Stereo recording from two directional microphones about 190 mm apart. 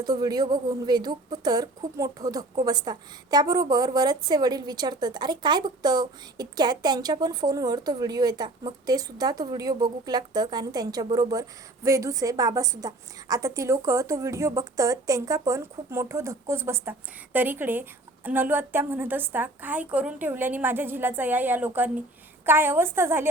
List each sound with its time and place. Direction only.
0.0 s a woman's voice: 20° right (ahead or behind)